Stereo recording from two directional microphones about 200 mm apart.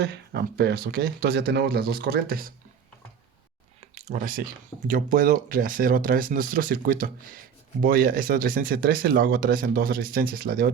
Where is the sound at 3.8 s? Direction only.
35° right (ahead or behind).